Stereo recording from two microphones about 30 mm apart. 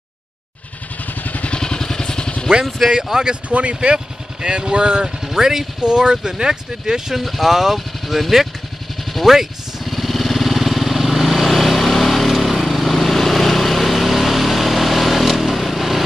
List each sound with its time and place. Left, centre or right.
1.5 s vehicle: left
2.9 s speech: right
3.4 s speech: right
3.9 s speech: right
5.2 s speech: centre
5.8 s speech: right
7.2 s speech: centre
9.8 s vehicle: centre